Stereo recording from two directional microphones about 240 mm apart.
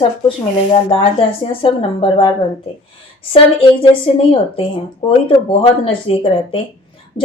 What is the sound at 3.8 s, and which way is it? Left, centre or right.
Speech, left.